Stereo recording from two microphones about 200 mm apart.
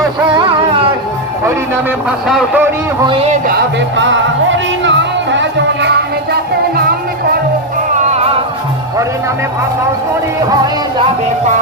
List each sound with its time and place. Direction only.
1.5 s a man's voice: 5° right (ahead or behind)
3.1 s music: 30° right (ahead or behind)
3.8 s music: 65° right (ahead or behind)